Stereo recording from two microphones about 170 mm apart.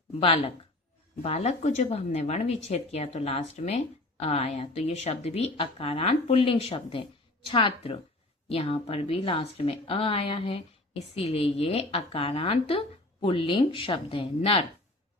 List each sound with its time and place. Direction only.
0.2 s speech: 35° left (ahead or behind)